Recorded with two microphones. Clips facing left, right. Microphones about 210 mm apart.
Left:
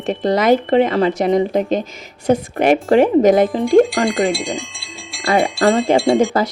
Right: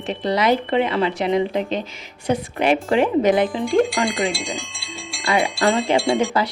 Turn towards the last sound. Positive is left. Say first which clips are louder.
# left 5 dB
turn(degrees=0)  # may be behind; listen again after turning